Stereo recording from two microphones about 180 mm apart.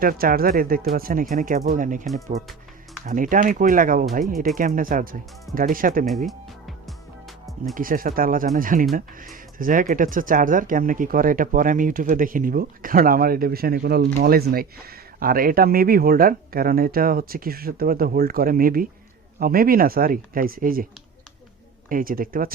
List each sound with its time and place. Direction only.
0.0 s speech: 55° right (ahead or behind)
3.1 s speech: 50° right (ahead or behind)
6.2 s music: centre (ahead or behind)
7.8 s speech: 50° right (ahead or behind)
21.8 s speech: 50° right (ahead or behind)